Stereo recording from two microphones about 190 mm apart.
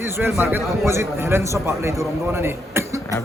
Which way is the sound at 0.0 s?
10° right (ahead or behind).